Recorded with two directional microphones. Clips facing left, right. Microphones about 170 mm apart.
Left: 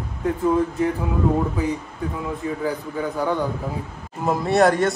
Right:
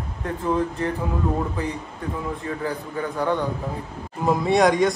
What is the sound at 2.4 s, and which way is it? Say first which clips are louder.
Speech: left 3 dB; 10° left (ahead or behind).